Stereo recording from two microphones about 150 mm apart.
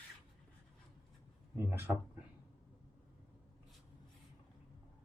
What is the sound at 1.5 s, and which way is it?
Speech, 15° right (ahead or behind).